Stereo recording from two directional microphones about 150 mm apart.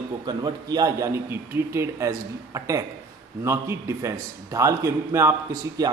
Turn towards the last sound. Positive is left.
turn(degrees=-20)  # may be behind; listen again after turning